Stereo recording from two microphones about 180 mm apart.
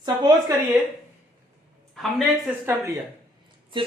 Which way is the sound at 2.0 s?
Centre (ahead or behind).